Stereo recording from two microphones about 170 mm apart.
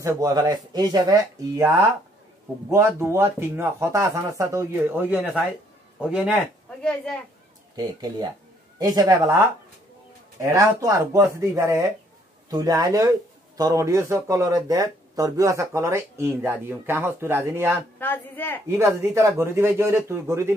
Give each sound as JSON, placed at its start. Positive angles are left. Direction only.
{"t": 0.0, "sound": "a man's voice", "side_deg": -20}
{"t": 6.8, "sound": "speech", "side_deg": 5}
{"t": 7.7, "sound": "speech", "side_deg": -25}
{"t": 17.9, "sound": "speech", "side_deg": 10}
{"t": 18.7, "sound": "speech", "side_deg": -15}